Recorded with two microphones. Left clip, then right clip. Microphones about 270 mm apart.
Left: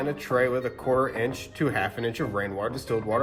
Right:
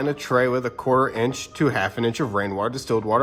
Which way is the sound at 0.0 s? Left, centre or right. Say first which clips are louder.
Right 4 dB; centre.